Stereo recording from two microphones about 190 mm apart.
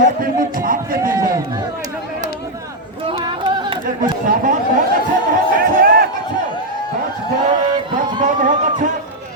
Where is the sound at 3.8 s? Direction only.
45° right (ahead or behind).